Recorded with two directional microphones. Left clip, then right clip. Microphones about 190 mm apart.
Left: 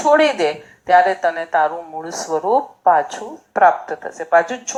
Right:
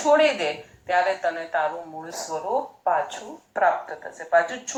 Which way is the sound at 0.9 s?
30° left (ahead or behind).